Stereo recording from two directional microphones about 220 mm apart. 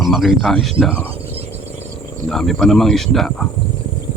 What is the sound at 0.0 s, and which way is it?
Speech, centre (ahead or behind).